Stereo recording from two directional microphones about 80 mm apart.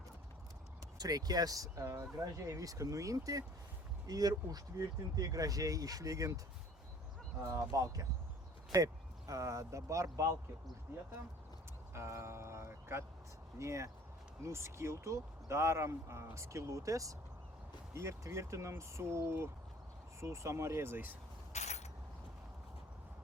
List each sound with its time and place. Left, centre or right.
0.9 s speech: right
7.5 s speech: right
11.9 s speech: right